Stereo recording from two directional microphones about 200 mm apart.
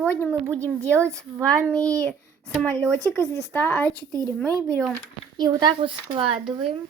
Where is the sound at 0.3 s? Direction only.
10° right (ahead or behind).